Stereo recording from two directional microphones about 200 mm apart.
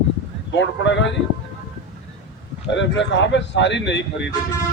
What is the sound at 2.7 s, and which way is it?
Speech, 65° left (ahead or behind).